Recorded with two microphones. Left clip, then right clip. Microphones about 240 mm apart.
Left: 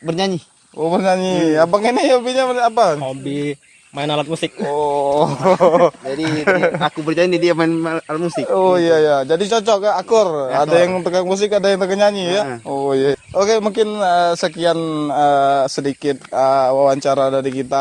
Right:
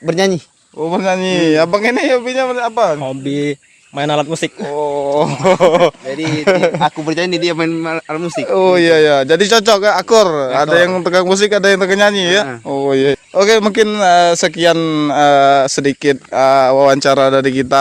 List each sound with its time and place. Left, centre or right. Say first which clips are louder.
0.1 s speech: right 6 dB; right
0.8 s speech: even; centre
1.3 s a man's voice: right 5 dB; right
1.7 s speech: right 1 dB; centre
3.2 s a man's voice: right 5 dB; right
4.7 s speech: left 1 dB; centre
5.0 s speech: right 1 dB; right
5.5 s a man's voice: right 2 dB; right
7.5 s speech: even; centre
8.4 s a man's voice: right 4 dB; right
10.7 s a man's voice: right 3 dB; right